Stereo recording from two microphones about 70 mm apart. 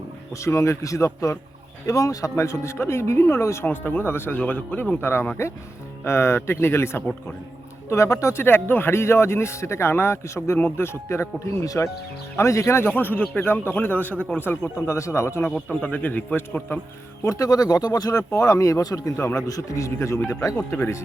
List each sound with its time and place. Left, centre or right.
0.3 s speech: left
3.7 s a man's voice: left
4.4 s a man's voice: centre
14.8 s speech: left
15.5 s a man's voice: centre
17.2 s speech: left
19.1 s speech: left
19.4 s speech: left